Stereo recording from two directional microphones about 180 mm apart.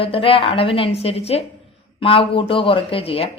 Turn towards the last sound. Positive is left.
turn(degrees=30)  # may be behind; listen again after turning